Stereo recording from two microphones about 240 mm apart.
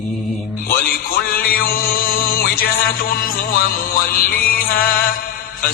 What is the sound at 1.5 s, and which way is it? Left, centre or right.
Music, left.